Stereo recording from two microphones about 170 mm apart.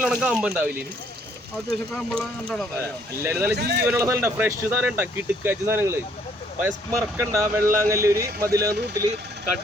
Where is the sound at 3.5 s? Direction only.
70° right (ahead or behind).